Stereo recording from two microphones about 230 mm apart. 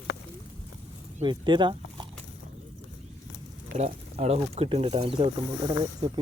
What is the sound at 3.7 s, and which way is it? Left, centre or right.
Speech, right.